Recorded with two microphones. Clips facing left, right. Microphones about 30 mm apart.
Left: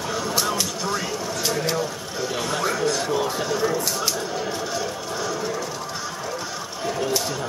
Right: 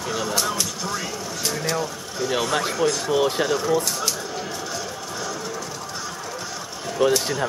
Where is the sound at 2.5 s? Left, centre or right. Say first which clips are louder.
Left 1 dB; centre.